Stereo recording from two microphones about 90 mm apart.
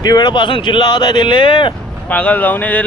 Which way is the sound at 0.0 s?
50° left (ahead or behind).